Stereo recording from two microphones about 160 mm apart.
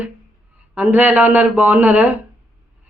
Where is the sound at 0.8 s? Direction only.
10° right (ahead or behind).